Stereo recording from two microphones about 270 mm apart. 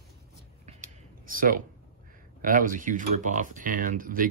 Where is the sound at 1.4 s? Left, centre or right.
Right.